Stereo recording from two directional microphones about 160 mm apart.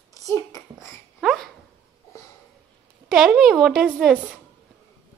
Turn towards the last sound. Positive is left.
turn(degrees=-5)  # may be behind; listen again after turning